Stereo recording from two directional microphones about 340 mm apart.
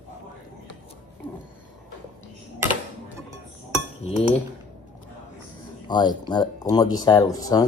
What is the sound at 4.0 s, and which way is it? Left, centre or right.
Cutlery, centre.